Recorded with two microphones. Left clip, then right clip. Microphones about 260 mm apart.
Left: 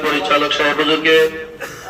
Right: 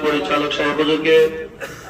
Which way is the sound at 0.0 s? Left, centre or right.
Centre.